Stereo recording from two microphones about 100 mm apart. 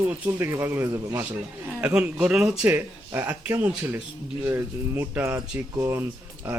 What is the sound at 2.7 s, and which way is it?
A man's voice, 25° right (ahead or behind).